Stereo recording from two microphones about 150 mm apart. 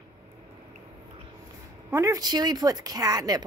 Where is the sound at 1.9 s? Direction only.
20° right (ahead or behind).